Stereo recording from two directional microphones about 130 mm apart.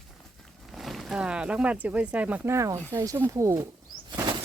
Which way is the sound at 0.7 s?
Centre (ahead or behind).